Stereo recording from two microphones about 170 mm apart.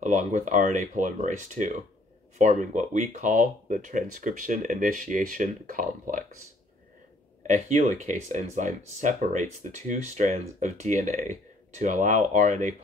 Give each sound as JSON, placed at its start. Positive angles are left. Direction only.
{"t": 0.0, "sound": "speech", "side_deg": -45}
{"t": 7.4, "sound": "speech", "side_deg": -45}